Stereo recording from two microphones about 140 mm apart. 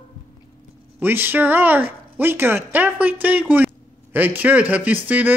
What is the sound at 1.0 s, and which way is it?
A man's voice, 15° right (ahead or behind).